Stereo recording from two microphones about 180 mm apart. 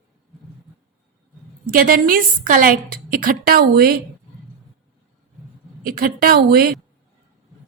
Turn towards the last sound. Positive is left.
turn(degrees=-55)  # may be behind; listen again after turning